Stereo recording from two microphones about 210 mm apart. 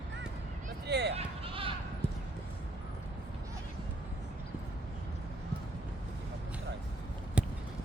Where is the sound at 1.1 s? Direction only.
25° right (ahead or behind).